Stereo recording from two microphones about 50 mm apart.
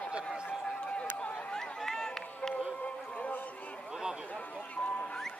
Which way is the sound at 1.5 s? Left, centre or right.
Centre.